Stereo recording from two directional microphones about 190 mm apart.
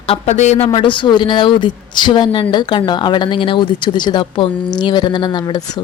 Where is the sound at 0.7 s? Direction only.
25° left (ahead or behind).